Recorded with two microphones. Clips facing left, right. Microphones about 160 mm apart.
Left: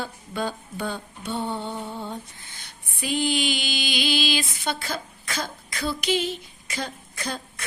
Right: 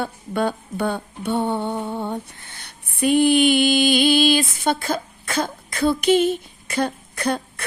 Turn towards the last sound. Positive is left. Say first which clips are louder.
# right 9 dB
turn(degrees=-60)  # may be behind; listen again after turning